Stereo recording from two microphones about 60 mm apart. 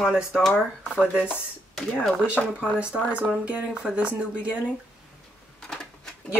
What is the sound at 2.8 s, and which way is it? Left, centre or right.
Speech, centre.